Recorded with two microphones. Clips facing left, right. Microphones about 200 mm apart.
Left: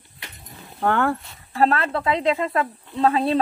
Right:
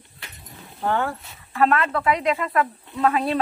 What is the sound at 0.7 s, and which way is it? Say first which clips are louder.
Speech: left 3 dB; 60° left (ahead or behind).